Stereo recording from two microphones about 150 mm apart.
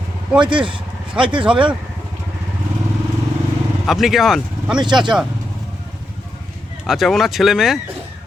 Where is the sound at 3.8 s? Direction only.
Centre (ahead or behind).